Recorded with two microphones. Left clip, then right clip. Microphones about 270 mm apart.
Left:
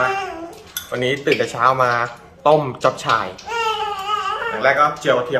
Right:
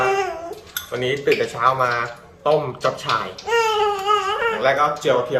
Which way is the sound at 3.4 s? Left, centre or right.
Right.